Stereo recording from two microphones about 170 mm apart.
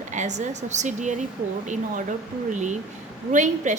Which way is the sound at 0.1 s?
45° right (ahead or behind).